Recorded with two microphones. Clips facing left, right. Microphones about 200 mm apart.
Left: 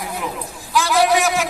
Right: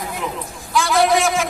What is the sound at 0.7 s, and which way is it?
Speech, centre (ahead or behind).